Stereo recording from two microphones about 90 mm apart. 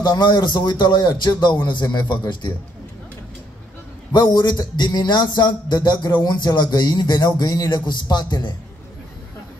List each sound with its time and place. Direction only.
0.0 s speech: 50° left (ahead or behind)
4.1 s speech: 50° left (ahead or behind)